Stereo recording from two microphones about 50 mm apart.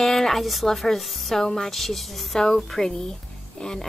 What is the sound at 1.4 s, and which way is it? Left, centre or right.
Speech, centre.